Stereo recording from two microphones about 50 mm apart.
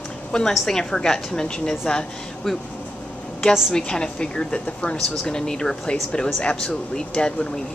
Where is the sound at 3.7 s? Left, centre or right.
Centre.